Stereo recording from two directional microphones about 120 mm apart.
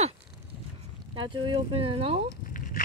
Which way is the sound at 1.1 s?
40° right (ahead or behind).